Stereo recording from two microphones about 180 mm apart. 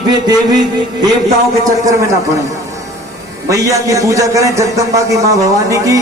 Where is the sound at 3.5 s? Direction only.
20° right (ahead or behind).